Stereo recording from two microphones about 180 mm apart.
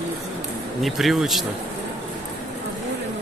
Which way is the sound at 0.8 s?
Centre (ahead or behind).